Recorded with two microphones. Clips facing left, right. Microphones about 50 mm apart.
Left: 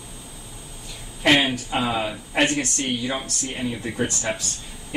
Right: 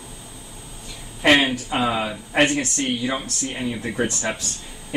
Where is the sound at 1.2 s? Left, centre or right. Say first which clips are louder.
Right 2 dB; centre.